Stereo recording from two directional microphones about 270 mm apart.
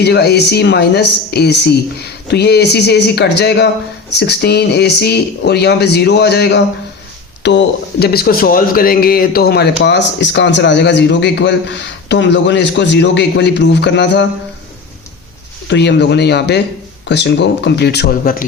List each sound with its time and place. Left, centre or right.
0.0 s speech: left
15.6 s speech: left